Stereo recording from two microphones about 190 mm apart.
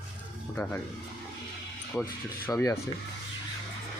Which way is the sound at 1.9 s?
10° left (ahead or behind).